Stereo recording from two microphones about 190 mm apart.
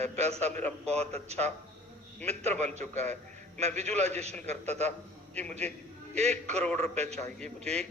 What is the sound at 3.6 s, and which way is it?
A man's voice, 35° right (ahead or behind).